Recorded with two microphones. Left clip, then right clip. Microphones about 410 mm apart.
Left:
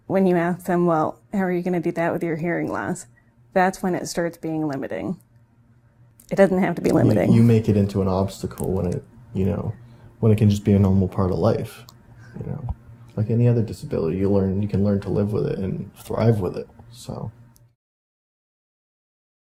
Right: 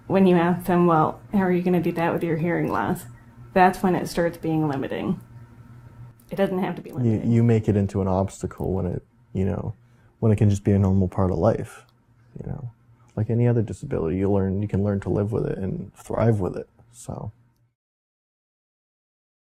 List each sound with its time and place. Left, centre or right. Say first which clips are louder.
0.1 s speech: right 1 dB; left
6.2 s speech: left 7 dB; left
7.3 s speech: left 3 dB; right
13.1 s speech: left 1 dB; right